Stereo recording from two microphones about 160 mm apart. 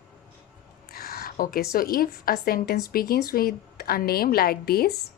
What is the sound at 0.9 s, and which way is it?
A woman's voice, 75° left (ahead or behind).